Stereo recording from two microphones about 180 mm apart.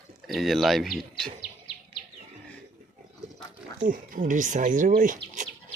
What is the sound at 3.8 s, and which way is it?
Speech, 50° right (ahead or behind).